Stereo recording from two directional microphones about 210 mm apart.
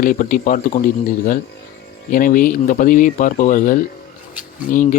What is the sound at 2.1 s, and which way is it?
Speech, 40° left (ahead or behind).